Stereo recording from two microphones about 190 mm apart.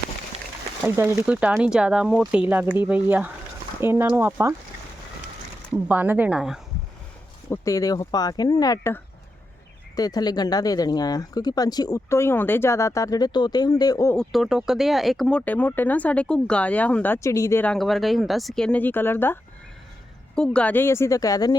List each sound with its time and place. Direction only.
0.9 s speech: 15° right (ahead or behind)
5.9 s speech: 10° right (ahead or behind)
7.5 s speech: 15° left (ahead or behind)
14.2 s speech: centre (ahead or behind); by 21.5 s 20° left (ahead or behind)